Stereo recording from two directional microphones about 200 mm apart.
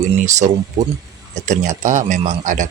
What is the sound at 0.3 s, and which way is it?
Speech, 35° right (ahead or behind).